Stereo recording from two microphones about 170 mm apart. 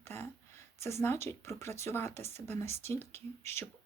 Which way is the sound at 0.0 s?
15° left (ahead or behind).